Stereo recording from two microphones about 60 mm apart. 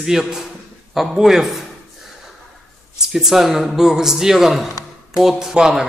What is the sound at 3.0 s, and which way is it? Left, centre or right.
A man's voice, centre.